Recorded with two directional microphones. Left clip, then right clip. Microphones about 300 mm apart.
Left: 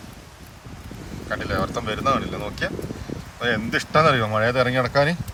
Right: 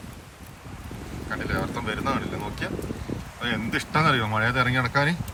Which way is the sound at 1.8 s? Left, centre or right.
Centre.